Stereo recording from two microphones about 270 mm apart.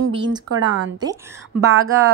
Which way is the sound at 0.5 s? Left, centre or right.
Right.